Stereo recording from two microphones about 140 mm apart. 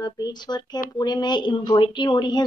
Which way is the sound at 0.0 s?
30° left (ahead or behind).